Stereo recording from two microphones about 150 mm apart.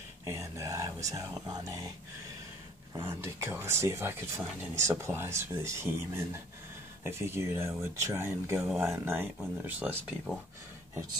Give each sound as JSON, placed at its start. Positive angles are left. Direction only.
{"t": 0.2, "sound": "speech", "side_deg": -20}
{"t": 2.9, "sound": "speech", "side_deg": -15}